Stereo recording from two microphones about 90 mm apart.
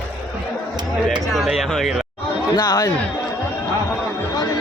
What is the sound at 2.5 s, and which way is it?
Speech, 50° left (ahead or behind).